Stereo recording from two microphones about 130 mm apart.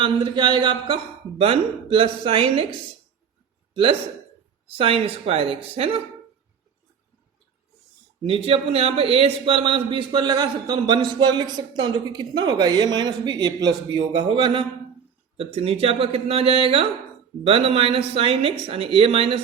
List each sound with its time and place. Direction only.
0.0 s a man's voice: 40° right (ahead or behind)
4.8 s a man's voice: 45° right (ahead or behind)
8.3 s a man's voice: 50° right (ahead or behind)